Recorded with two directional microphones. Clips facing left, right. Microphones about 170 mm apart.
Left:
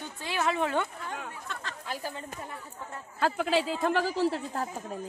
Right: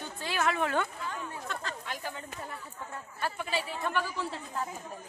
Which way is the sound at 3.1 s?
90° left.